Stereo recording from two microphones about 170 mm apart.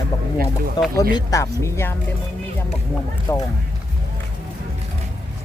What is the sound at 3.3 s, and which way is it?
Speech, 15° left (ahead or behind).